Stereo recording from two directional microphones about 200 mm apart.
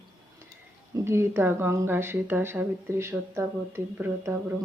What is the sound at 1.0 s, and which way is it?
A woman's voice, 10° right (ahead or behind).